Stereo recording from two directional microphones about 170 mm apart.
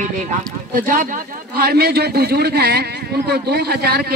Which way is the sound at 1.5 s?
70° right (ahead or behind).